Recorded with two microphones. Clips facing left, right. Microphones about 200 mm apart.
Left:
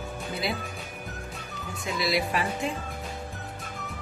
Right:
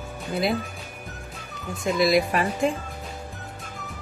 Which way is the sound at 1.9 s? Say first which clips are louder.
Right 6 dB; 45° right (ahead or behind).